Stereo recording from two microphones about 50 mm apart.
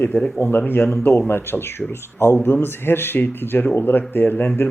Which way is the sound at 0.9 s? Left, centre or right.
Left.